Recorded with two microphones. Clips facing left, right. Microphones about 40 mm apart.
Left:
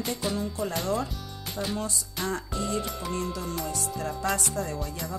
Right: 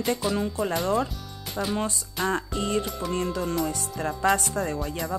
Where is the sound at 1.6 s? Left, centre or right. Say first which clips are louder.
Right 3 dB; right.